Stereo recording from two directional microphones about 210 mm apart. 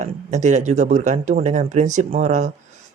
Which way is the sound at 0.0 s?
35° right (ahead or behind).